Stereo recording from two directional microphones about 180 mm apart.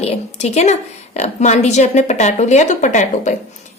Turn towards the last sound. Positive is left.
turn(degrees=40)  # may be behind; listen again after turning